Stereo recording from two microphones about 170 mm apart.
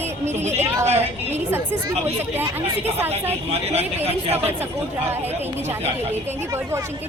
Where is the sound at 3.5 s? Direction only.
35° right (ahead or behind).